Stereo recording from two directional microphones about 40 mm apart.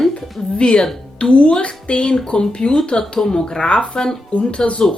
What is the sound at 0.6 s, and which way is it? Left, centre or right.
Speech, left.